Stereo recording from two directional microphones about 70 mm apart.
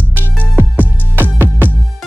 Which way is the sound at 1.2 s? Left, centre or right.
Right.